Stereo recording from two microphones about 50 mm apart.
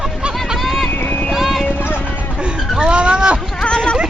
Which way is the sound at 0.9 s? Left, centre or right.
Left.